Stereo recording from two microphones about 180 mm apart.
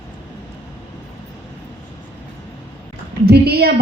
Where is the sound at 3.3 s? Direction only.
60° right (ahead or behind).